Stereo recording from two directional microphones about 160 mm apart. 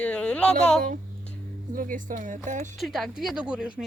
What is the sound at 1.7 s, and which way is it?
Speech, 60° right (ahead or behind).